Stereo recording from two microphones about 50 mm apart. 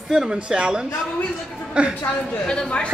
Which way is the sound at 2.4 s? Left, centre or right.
Centre.